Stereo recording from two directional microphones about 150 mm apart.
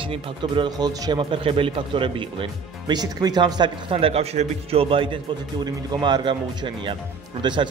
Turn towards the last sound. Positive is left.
turn(degrees=-30)  # may be behind; listen again after turning